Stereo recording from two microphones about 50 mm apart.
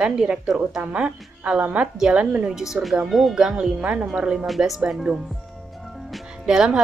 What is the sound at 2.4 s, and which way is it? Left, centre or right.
Speech, centre.